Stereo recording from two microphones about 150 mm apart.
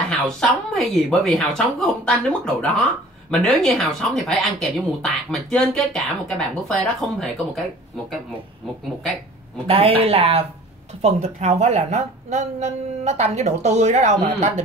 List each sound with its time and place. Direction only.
0.1 s speech: centre (ahead or behind)
9.7 s a woman's voice: 40° right (ahead or behind)